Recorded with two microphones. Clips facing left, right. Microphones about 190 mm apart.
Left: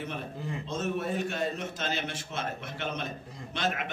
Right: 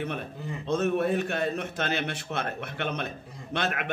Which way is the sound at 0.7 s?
60° right (ahead or behind).